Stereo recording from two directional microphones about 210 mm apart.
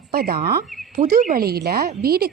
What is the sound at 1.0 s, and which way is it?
Speech, 35° right (ahead or behind).